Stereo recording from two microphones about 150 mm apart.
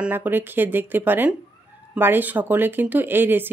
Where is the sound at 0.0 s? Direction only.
10° right (ahead or behind).